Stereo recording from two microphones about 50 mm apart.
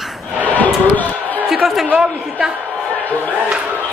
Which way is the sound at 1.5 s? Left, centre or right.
Centre.